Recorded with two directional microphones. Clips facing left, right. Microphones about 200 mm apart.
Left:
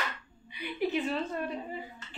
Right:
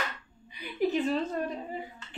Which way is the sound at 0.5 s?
40° right (ahead or behind).